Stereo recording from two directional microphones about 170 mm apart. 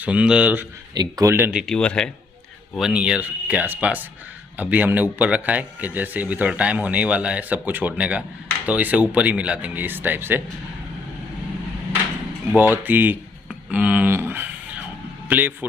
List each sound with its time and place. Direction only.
0.0 s a man's voice: 5° right (ahead or behind)
0.9 s speech: 20° right (ahead or behind)
1.5 s a man's voice: centre (ahead or behind)
12.5 s a man's voice: 10° right (ahead or behind)